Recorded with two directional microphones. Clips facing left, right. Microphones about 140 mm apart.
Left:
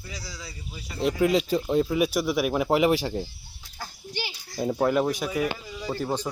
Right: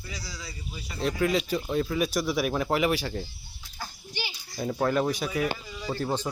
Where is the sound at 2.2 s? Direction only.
5° left (ahead or behind).